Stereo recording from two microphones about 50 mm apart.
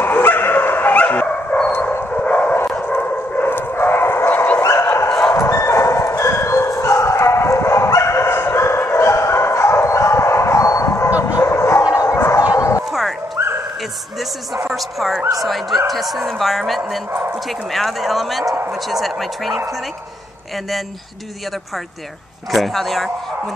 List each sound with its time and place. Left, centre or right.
0.0 s dog: left
0.9 s dog: left
3.0 s bow-wow: left
4.6 s dog: left
4.8 s dog: left
5.3 s bow-wow: left
12.3 s bow-wow: left
13.4 s dog: right
14.8 s dog: centre
15.4 s a sound: centre
17.5 s bow-wow: centre
18.7 s a sound: centre
22.5 s speech: centre